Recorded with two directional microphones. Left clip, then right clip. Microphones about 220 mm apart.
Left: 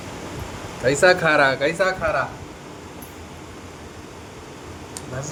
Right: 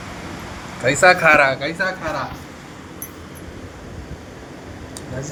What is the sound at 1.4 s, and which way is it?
Speech, 35° left (ahead or behind).